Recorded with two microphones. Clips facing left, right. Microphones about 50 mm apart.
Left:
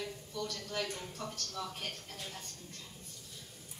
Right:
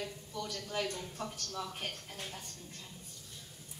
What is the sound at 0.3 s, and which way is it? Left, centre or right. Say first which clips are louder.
A man's voice: even; centre.